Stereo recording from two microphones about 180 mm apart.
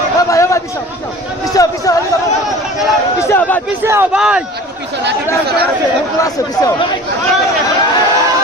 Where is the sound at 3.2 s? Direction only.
10° left (ahead or behind).